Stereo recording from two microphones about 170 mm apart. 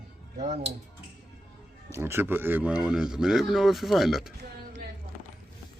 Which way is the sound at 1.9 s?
15° right (ahead or behind).